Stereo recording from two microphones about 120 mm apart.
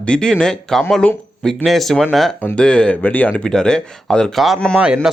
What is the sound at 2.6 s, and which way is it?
Speech, 5° left (ahead or behind).